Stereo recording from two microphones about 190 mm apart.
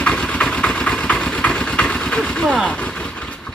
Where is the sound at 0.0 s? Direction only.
5° left (ahead or behind).